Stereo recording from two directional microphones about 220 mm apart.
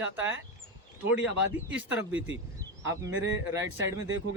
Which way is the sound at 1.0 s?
5° right (ahead or behind).